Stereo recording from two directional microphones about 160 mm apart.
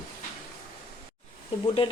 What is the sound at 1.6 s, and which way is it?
Speech, 30° left (ahead or behind).